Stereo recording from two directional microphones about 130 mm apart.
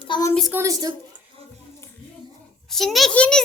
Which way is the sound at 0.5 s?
25° right (ahead or behind).